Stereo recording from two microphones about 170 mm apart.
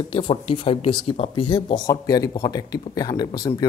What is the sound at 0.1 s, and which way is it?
Speech, 30° left (ahead or behind).